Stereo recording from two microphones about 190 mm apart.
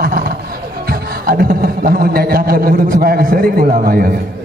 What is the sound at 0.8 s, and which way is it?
A man's voice, 50° right (ahead or behind).